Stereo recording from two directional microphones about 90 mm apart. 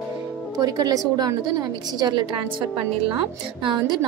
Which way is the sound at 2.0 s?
60° right (ahead or behind).